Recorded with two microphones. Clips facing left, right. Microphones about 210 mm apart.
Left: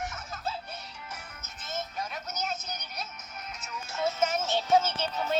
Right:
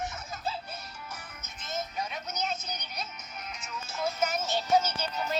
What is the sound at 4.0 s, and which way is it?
Music, 25° left (ahead or behind).